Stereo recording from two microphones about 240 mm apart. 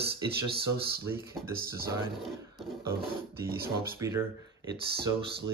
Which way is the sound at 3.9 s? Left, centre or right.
Centre.